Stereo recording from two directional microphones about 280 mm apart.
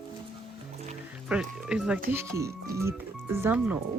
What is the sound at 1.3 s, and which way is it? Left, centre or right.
Speech, centre.